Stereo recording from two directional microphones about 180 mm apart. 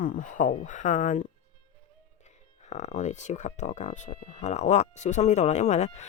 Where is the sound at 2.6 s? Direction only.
40° left (ahead or behind).